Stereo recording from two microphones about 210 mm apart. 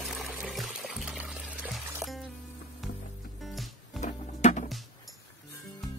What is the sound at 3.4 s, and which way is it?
Music, centre (ahead or behind).